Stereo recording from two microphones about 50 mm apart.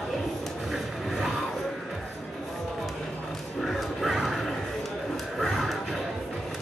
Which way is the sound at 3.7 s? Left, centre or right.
Centre.